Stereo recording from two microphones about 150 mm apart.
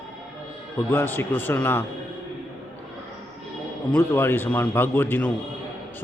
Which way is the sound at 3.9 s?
15° left (ahead or behind).